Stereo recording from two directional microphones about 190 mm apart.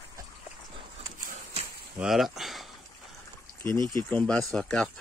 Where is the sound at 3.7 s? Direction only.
20° right (ahead or behind).